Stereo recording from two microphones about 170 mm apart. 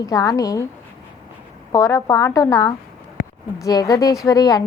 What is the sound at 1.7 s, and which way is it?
A woman's voice, 20° left (ahead or behind).